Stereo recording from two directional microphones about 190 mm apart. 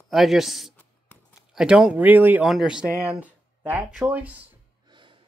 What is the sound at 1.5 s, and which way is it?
Speech, 5° right (ahead or behind).